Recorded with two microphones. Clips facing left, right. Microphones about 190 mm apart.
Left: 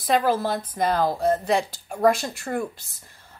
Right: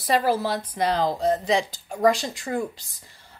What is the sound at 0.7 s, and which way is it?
Speech, 50° left (ahead or behind).